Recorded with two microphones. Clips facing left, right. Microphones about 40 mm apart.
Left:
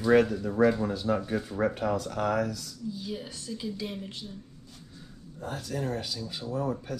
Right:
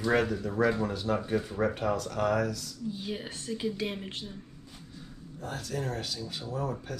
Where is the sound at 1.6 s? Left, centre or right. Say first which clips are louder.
Left 3 dB; centre.